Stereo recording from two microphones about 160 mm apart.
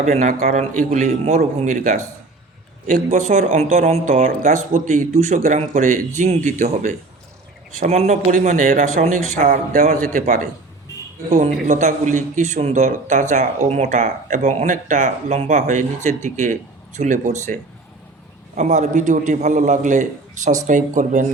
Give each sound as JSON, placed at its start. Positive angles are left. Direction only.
{"t": 0.0, "sound": "a man's voice", "side_deg": -45}
{"t": 11.3, "sound": "a man's voice", "side_deg": -45}